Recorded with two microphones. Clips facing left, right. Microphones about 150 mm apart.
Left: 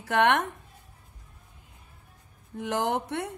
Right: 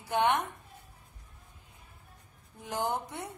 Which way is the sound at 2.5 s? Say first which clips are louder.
Left 5 dB; 85° left.